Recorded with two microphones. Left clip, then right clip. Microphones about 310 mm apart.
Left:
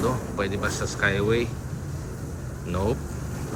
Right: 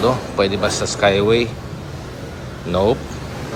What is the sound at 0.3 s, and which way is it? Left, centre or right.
Speech, centre.